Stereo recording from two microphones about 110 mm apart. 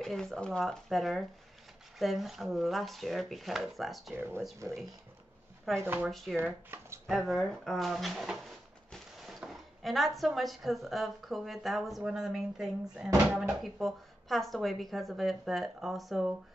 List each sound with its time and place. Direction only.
0.0 s speech: 5° left (ahead or behind)
4.6 s speech: 25° right (ahead or behind)
6.0 s speech: centre (ahead or behind)
6.7 s a sound: 20° right (ahead or behind)
7.1 s speech: centre (ahead or behind)
8.9 s a sound: centre (ahead or behind)
9.5 s speech: centre (ahead or behind)